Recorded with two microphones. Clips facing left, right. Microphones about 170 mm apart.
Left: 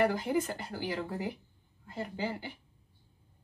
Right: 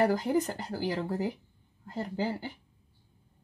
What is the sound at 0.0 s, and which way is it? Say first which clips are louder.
Speech: right 3 dB; 40° right (ahead or behind).